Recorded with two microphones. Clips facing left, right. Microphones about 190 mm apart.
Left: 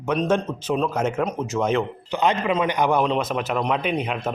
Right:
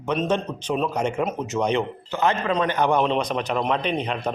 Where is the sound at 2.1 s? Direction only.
15° left (ahead or behind).